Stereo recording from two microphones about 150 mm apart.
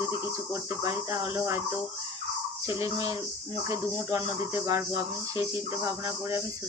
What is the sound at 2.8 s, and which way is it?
Speech, 20° right (ahead or behind).